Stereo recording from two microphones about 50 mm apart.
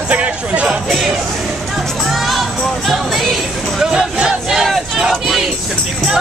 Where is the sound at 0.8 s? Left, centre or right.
Centre.